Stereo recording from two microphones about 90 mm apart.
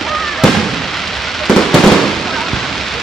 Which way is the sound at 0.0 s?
Centre (ahead or behind).